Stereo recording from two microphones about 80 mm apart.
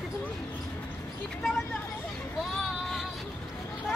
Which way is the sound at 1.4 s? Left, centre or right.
Centre.